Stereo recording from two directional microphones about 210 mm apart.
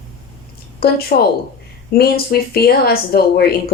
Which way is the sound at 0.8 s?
45° left (ahead or behind).